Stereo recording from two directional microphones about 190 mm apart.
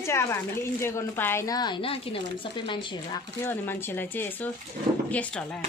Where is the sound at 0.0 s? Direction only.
15° left (ahead or behind).